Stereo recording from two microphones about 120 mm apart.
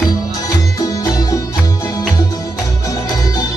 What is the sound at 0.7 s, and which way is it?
Music, 30° left (ahead or behind).